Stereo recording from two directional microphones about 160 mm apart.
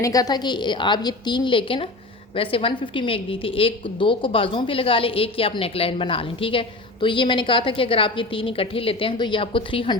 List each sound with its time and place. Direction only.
0.0 s a woman's voice: 20° left (ahead or behind)